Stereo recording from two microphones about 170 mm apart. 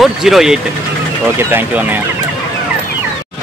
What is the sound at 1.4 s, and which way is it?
Speech, 15° right (ahead or behind).